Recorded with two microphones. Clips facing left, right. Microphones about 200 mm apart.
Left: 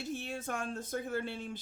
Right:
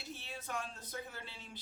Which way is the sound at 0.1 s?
50° left (ahead or behind).